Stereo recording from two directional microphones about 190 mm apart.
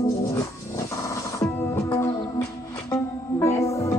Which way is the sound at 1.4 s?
15° left (ahead or behind).